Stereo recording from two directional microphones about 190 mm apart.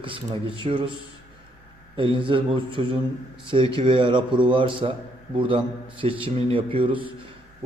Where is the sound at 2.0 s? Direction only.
25° right (ahead or behind).